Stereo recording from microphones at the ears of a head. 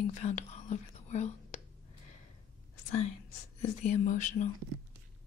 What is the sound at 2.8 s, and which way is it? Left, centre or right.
Speech, left.